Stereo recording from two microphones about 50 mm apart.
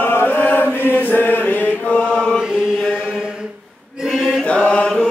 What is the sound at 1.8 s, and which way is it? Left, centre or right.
Chant, left.